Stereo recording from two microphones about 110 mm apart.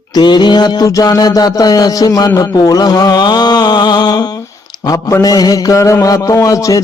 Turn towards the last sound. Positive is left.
turn(degrees=30)  # may be behind; listen again after turning